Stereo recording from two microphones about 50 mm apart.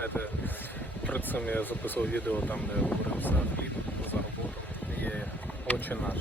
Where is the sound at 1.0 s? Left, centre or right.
Left.